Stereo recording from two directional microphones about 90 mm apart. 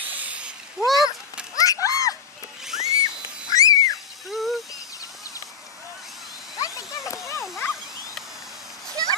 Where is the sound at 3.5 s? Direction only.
40° left (ahead or behind).